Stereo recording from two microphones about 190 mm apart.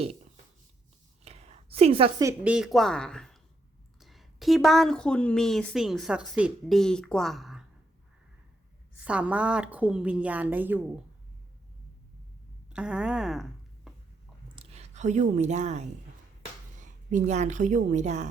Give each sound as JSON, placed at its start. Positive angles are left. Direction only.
{"t": 1.2, "sound": "a sound", "side_deg": -35}
{"t": 2.2, "sound": "a woman's voice", "side_deg": -5}
{"t": 9.0, "sound": "a woman's voice", "side_deg": -5}
{"t": 12.7, "sound": "speech", "side_deg": -5}
{"t": 14.5, "sound": "a woman's voice", "side_deg": -30}